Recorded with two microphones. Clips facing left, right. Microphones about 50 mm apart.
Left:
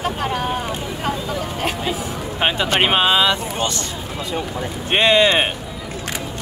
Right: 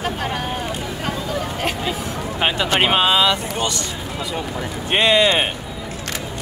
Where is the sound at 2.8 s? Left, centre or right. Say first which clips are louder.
Even; left.